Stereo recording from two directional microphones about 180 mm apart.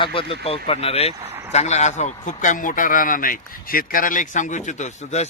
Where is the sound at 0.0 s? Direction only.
30° left (ahead or behind).